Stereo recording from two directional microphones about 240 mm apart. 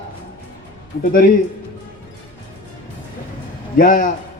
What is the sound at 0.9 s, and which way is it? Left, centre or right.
Speech, left.